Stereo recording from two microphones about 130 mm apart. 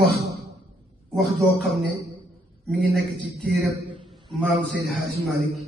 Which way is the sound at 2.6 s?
5° left (ahead or behind).